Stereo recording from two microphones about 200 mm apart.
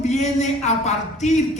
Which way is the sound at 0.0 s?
35° left (ahead or behind).